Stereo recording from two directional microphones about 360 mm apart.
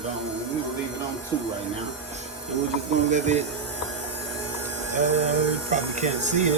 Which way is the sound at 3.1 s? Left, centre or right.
Centre.